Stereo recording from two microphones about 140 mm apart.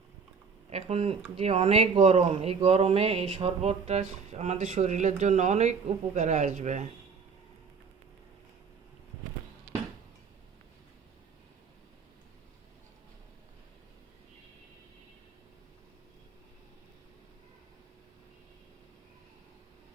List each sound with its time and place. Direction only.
0.7 s speech: 45° right (ahead or behind)